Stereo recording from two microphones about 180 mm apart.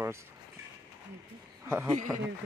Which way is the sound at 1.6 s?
10° right (ahead or behind).